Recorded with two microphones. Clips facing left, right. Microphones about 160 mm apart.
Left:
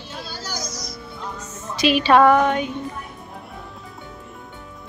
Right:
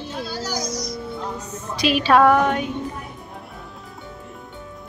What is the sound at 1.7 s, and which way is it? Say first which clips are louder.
Speech: left 1 dB; centre (ahead or behind).